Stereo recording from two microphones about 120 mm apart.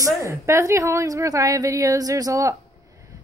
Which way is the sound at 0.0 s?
25° right (ahead or behind).